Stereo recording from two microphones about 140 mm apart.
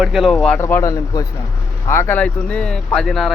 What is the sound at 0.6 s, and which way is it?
Speech, 20° left (ahead or behind).